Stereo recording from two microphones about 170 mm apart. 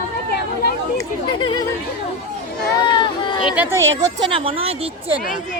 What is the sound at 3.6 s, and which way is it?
Speech, 15° right (ahead or behind).